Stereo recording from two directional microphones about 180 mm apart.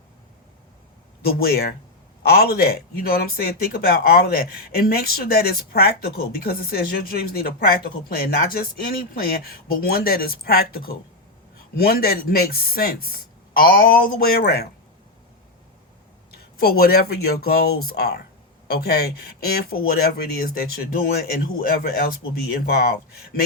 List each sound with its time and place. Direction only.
1.4 s speech: 60° left (ahead or behind)
16.6 s speech: 60° left (ahead or behind)